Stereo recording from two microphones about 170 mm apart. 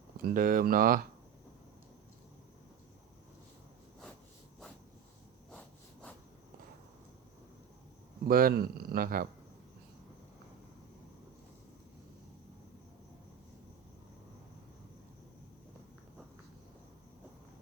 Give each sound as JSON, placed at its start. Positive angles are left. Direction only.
{"t": 0.2, "sound": "speech", "side_deg": -55}
{"t": 5.5, "sound": "insect", "side_deg": 5}
{"t": 8.3, "sound": "speech", "side_deg": -60}